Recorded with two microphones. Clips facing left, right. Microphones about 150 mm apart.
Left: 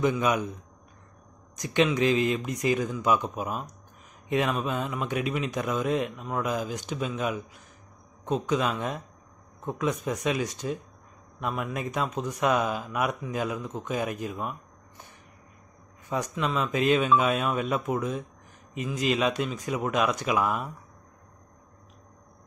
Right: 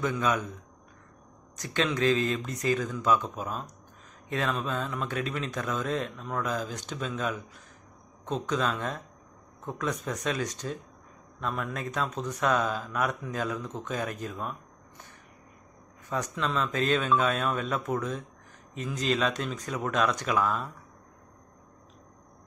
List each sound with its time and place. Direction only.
0.0 s speech: 15° left (ahead or behind)
1.6 s speech: 15° left (ahead or behind)
16.1 s speech: 10° left (ahead or behind)